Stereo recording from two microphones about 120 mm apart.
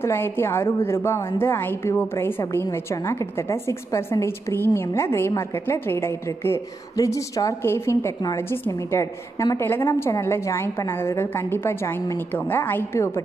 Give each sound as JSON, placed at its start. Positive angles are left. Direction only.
{"t": 0.0, "sound": "a woman's voice", "side_deg": 20}